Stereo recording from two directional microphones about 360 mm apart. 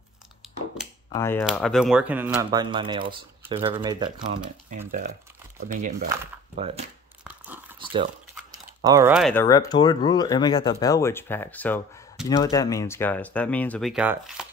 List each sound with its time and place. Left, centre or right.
1.1 s speech: centre
7.2 s a sound: centre
8.8 s speech: centre